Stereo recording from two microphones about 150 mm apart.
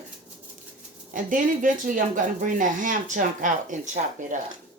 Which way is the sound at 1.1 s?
60° right (ahead or behind).